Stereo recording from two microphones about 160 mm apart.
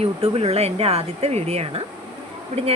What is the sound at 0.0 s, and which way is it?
Speech, 40° right (ahead or behind).